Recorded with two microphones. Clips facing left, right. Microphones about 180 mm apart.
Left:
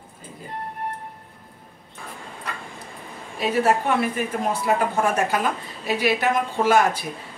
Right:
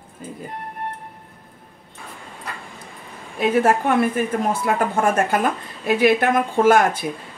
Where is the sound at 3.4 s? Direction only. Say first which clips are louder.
Right 3 dB; 50° right (ahead or behind).